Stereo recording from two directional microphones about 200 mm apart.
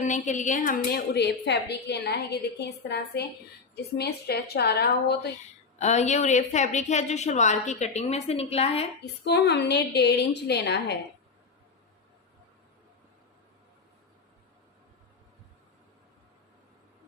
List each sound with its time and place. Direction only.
0.1 s a woman's voice: 40° left (ahead or behind); by 5.3 s 55° left (ahead or behind)
5.8 s a woman's voice: 35° left (ahead or behind)
9.2 s a woman's voice: 55° left (ahead or behind)